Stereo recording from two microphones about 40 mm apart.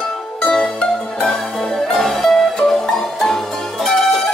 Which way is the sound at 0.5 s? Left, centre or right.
Centre.